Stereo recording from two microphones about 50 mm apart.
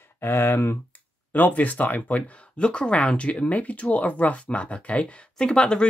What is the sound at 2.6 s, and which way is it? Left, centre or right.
Speech, centre.